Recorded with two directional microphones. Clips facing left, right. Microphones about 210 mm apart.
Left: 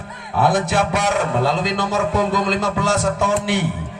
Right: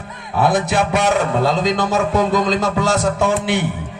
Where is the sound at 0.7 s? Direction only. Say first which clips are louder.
Right 2 dB; 15° right (ahead or behind).